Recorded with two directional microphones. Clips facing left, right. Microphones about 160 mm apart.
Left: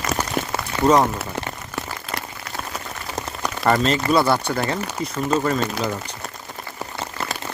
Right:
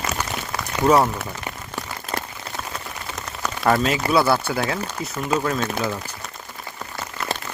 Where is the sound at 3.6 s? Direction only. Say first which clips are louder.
Left 1 dB; 5° right (ahead or behind).